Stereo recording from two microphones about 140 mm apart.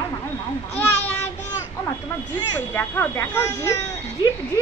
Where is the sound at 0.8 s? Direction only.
15° left (ahead or behind).